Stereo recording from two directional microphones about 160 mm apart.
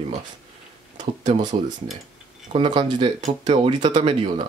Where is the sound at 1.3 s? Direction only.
40° right (ahead or behind).